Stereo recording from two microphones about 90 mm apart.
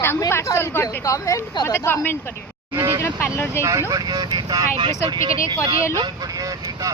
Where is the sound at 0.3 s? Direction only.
30° left (ahead or behind).